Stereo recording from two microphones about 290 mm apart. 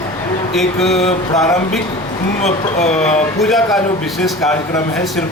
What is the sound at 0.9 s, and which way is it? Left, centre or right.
Speech, left.